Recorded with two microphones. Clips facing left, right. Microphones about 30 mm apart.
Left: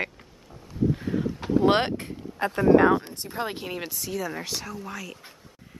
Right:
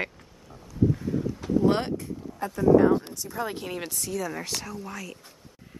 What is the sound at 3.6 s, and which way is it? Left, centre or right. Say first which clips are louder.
Speech: even; centre.